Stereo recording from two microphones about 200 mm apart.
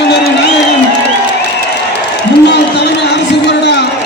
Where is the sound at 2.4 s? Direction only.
60° left (ahead or behind).